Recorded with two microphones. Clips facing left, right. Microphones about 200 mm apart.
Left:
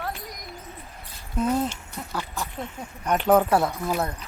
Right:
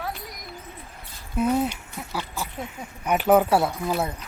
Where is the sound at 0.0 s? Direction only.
Centre (ahead or behind).